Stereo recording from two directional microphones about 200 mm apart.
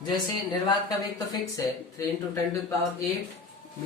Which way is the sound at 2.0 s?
15° left (ahead or behind).